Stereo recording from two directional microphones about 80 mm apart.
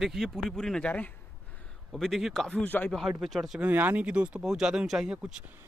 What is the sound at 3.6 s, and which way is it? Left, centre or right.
Speech, right.